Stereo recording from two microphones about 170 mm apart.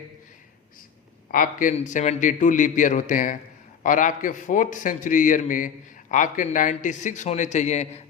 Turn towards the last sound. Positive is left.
turn(degrees=40)  # may be behind; listen again after turning